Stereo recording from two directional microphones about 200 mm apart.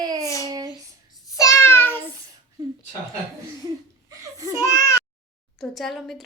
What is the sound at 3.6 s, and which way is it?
Laughter, 15° right (ahead or behind).